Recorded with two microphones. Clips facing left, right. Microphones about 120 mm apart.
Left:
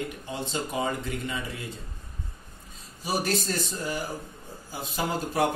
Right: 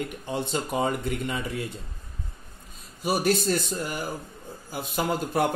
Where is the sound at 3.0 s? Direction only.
55° right (ahead or behind).